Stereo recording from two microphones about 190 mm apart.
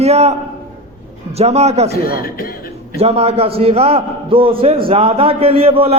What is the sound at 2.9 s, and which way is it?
A man's voice, 30° right (ahead or behind).